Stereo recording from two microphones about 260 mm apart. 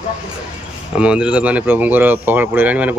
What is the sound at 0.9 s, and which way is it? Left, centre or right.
Speech, centre.